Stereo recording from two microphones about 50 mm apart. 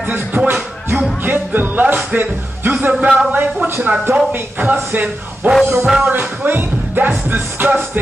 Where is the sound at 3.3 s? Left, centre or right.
Right.